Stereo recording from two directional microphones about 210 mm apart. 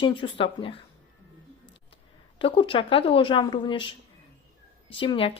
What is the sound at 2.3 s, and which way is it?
Speech, 25° left (ahead or behind).